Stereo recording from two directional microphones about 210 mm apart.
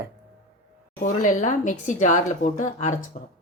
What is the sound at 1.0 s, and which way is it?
Speech, 35° left (ahead or behind).